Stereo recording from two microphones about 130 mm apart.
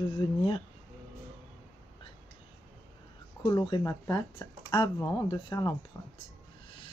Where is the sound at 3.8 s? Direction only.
20° left (ahead or behind).